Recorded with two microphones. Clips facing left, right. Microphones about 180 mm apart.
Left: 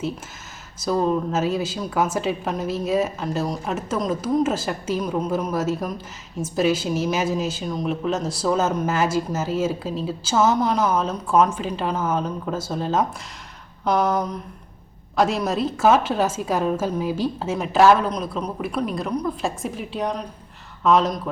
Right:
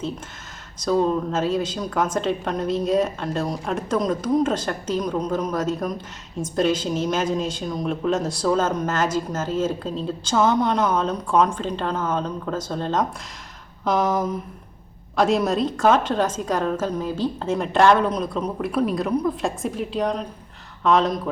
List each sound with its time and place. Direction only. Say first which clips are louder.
0.8 s a woman's voice: right 1 dB; 5° left (ahead or behind)